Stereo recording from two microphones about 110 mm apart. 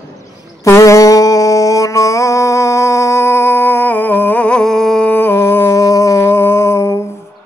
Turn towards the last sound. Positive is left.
turn(degrees=25)  # may be behind; listen again after turning